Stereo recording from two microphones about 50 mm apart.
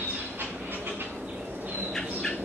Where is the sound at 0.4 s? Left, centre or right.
Right.